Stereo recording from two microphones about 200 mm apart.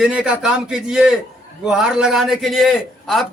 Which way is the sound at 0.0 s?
5° right (ahead or behind).